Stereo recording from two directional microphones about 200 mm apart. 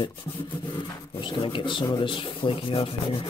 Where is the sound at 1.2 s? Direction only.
25° left (ahead or behind).